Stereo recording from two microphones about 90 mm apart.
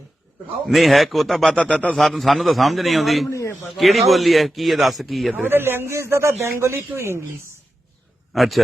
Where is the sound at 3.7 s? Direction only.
Centre (ahead or behind).